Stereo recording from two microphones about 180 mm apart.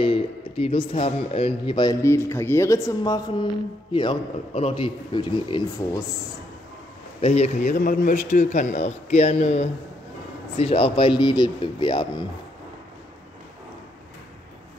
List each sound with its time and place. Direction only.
0.0 s a man's voice: 30° left (ahead or behind)
7.2 s a man's voice: 35° left (ahead or behind)